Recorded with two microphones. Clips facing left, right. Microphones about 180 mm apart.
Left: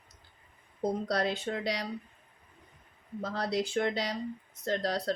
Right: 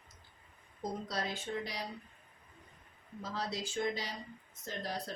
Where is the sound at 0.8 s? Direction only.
65° left (ahead or behind).